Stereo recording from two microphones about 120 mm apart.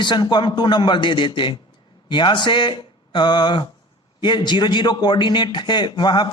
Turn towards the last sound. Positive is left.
turn(degrees=40)  # may be behind; listen again after turning